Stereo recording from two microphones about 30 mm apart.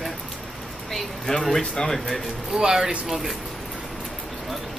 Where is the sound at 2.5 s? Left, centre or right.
Right.